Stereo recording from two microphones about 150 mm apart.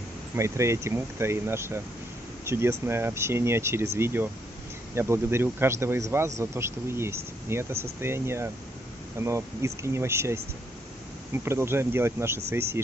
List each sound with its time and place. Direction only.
0.4 s speech: 20° right (ahead or behind)